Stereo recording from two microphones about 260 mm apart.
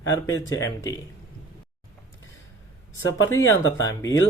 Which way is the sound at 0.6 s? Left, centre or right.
Centre.